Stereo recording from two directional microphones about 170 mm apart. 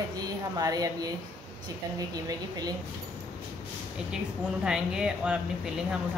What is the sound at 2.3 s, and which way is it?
Speech, 25° right (ahead or behind).